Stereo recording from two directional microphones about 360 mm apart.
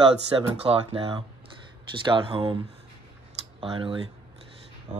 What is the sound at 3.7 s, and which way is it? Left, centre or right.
Speech, centre.